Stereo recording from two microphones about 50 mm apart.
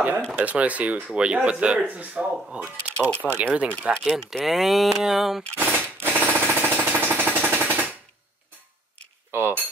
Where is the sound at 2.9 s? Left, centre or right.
Left.